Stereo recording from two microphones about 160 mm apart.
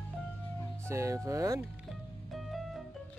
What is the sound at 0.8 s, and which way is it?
Speech, 20° right (ahead or behind).